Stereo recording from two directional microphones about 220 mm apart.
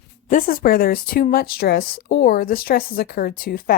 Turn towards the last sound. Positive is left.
turn(degrees=40)  # may be behind; listen again after turning